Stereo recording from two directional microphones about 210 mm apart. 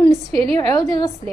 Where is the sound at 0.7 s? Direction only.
20° left (ahead or behind).